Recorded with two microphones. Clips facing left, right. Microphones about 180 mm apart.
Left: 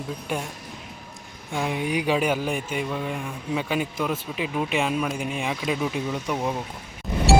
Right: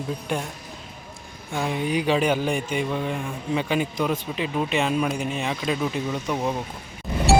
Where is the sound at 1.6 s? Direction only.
10° left (ahead or behind).